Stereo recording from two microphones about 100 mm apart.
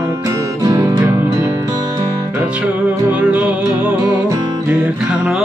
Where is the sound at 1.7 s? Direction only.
40° right (ahead or behind).